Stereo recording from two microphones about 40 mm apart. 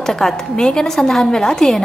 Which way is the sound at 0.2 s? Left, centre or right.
Centre.